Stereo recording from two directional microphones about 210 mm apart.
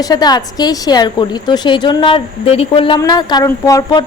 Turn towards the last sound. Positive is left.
turn(degrees=20)  # may be behind; listen again after turning